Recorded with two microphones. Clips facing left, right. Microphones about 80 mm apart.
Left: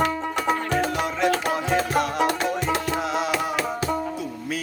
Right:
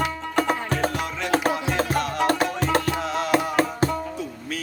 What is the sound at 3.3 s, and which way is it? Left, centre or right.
Music, right.